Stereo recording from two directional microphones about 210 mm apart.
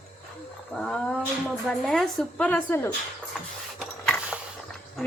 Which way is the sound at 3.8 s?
Centre (ahead or behind).